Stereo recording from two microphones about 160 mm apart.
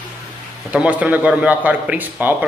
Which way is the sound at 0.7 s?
10° right (ahead or behind).